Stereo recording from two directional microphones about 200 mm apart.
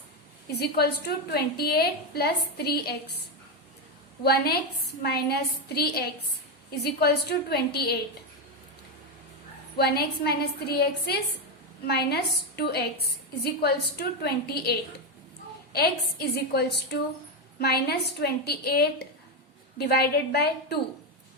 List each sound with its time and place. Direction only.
0.6 s a woman's voice: 55° left (ahead or behind)
4.2 s a woman's voice: 55° left (ahead or behind)
9.7 s a woman's voice: 55° left (ahead or behind)